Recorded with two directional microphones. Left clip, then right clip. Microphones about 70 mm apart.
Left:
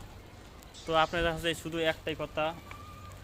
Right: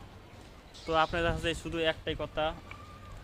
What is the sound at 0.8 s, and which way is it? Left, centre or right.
Speech, centre.